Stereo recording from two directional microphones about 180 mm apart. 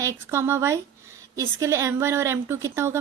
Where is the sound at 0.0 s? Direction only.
15° right (ahead or behind).